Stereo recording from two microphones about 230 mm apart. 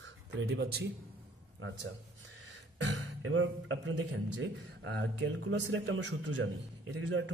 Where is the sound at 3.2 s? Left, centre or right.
Right.